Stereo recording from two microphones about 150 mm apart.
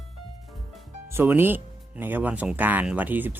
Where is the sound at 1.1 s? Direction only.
15° right (ahead or behind).